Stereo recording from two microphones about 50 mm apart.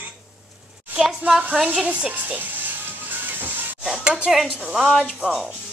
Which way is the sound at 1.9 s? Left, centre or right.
Right.